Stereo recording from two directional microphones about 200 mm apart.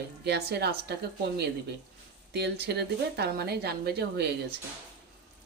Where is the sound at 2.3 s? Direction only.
55° right (ahead or behind).